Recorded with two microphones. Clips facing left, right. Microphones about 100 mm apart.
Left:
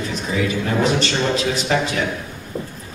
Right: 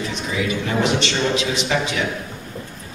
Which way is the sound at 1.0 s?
40° left (ahead or behind).